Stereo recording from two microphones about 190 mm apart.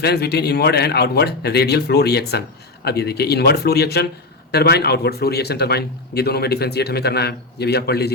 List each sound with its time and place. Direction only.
0.0 s speech: 60° left (ahead or behind)